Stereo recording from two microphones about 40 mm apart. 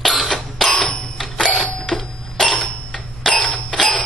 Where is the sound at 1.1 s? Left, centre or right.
Centre.